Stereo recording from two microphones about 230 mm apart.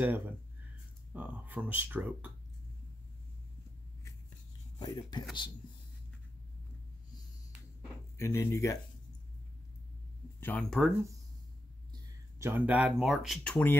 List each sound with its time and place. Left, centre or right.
1.1 s speech: centre
4.7 s speech: centre
8.2 s speech: centre
10.4 s speech: centre
11.9 s speech: centre